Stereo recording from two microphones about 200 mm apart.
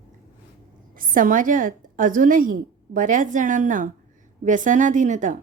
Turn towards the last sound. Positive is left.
turn(degrees=-40)  # may be behind; listen again after turning